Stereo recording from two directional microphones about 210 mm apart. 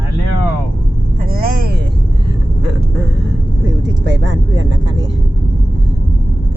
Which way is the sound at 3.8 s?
60° right (ahead or behind).